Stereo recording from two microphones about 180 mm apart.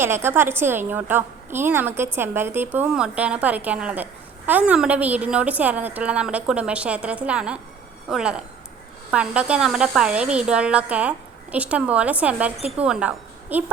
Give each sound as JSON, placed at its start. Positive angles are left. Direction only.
{"t": 0.0, "sound": "a woman's voice", "side_deg": -15}
{"t": 12.5, "sound": "speech", "side_deg": -35}
{"t": 12.8, "sound": "a woman's voice", "side_deg": -5}